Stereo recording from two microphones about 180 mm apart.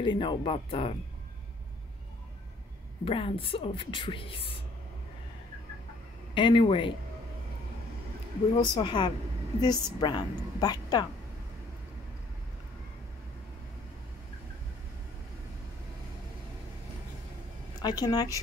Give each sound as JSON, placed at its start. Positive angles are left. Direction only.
{"t": 0.0, "sound": "a woman's voice", "side_deg": 25}
{"t": 3.1, "sound": "a woman's voice", "side_deg": 30}
{"t": 6.3, "sound": "a woman's voice", "side_deg": 30}
{"t": 8.5, "sound": "a woman's voice", "side_deg": 25}
{"t": 17.8, "sound": "a woman's voice", "side_deg": 20}